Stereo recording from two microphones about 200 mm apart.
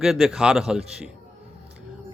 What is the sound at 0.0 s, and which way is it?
Speech, centre (ahead or behind).